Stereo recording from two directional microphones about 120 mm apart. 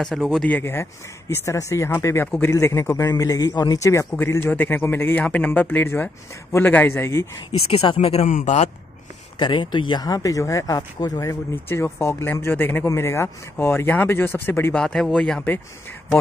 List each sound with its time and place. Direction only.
0.0 s a man's voice: 5° left (ahead or behind); by 7.2 s 20° left (ahead or behind)
7.7 s speech: 55° left (ahead or behind)
9.4 s speech: 40° left (ahead or behind); by 14.8 s 15° left (ahead or behind)
14.8 s a man's voice: 5° left (ahead or behind)